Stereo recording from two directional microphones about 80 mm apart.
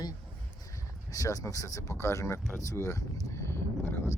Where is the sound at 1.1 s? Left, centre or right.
Left.